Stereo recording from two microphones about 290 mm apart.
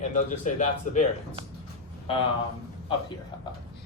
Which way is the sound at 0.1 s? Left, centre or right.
Left.